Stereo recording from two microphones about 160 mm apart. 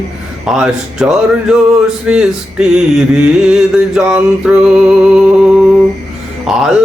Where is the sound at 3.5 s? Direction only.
5° right (ahead or behind).